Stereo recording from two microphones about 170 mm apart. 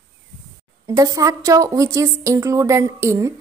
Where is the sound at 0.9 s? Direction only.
20° right (ahead or behind).